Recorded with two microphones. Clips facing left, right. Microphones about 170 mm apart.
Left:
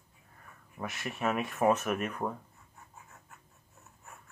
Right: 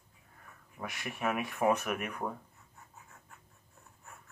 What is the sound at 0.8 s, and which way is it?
Speech, centre (ahead or behind).